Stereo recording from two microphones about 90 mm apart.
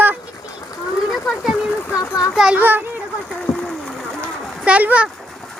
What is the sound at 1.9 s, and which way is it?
Speech, 40° left (ahead or behind).